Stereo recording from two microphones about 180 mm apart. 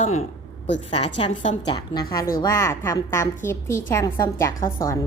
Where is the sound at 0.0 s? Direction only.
40° left (ahead or behind).